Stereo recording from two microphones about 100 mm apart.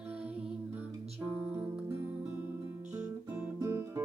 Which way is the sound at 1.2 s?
80° right.